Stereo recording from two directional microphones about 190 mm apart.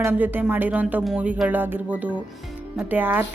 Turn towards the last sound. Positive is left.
turn(degrees=-10)  # may be behind; listen again after turning